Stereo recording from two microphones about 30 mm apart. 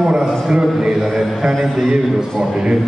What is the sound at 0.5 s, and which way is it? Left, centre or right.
A man's voice, right.